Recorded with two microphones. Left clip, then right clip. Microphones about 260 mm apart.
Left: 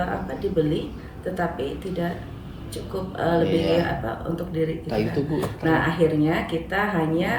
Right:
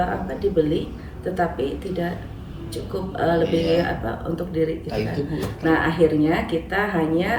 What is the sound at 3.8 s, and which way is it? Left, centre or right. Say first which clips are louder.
Speech: right 2 dB; centre.